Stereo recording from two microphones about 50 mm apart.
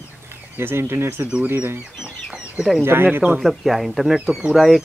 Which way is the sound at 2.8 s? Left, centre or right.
Right.